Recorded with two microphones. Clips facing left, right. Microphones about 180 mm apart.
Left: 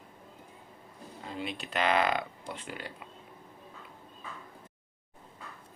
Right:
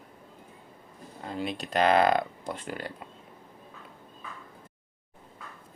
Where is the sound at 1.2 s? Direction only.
45° right (ahead or behind).